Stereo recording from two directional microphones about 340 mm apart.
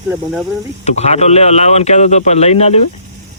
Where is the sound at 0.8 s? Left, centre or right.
Centre.